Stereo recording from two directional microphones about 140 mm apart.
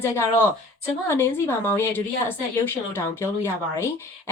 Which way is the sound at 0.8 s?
15° left (ahead or behind).